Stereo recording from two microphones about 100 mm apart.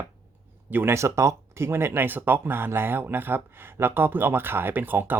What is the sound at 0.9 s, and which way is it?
Speech, 30° right (ahead or behind).